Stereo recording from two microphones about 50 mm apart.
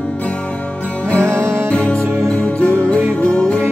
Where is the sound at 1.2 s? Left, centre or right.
Right.